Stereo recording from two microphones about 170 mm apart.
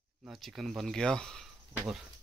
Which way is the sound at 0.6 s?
Centre (ahead or behind).